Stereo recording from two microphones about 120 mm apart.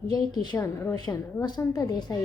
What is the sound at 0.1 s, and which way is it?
Speech, 35° left (ahead or behind).